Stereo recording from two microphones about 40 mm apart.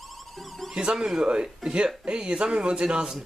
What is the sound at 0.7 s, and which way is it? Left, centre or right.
Speech, centre.